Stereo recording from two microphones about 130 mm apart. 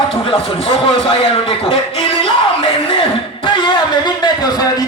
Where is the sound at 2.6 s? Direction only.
45° left (ahead or behind).